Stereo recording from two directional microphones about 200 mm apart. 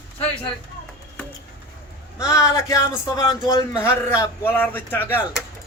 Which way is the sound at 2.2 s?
15° left (ahead or behind).